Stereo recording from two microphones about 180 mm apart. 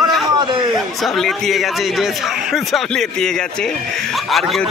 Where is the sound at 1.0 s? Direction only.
Centre (ahead or behind).